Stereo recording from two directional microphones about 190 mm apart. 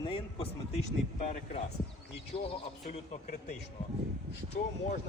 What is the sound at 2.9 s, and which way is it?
Speech, 40° left (ahead or behind).